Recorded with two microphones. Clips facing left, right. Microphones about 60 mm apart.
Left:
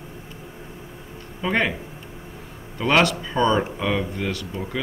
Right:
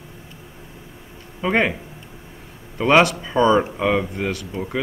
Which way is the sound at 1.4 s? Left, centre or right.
Centre.